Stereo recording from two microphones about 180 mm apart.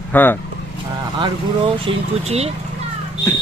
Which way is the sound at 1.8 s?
35° right (ahead or behind).